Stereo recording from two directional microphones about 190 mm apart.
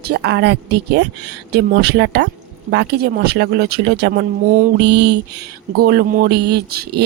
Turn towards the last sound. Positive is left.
turn(degrees=-60)  # may be behind; listen again after turning